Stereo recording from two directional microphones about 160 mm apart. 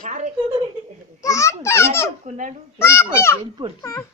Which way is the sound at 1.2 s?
20° left (ahead or behind).